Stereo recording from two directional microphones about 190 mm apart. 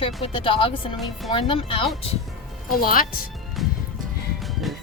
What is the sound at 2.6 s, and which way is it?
Speech, 50° left (ahead or behind).